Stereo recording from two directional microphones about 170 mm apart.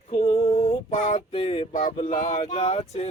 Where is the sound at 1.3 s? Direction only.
35° left (ahead or behind).